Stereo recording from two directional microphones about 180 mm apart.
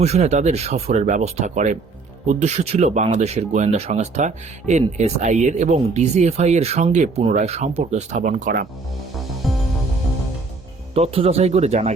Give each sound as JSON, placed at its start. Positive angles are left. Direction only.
{"t": 0.0, "sound": "speech", "side_deg": -35}
{"t": 10.9, "sound": "speech", "side_deg": -35}